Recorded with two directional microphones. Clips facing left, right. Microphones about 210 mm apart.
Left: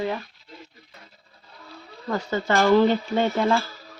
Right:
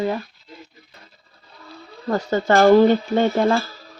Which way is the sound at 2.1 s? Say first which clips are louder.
Right 5 dB; 45° right (ahead or behind).